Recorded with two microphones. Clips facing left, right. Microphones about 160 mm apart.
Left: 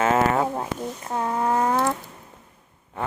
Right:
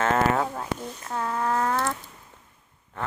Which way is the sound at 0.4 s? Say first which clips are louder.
Left 4 dB; 30° left (ahead or behind).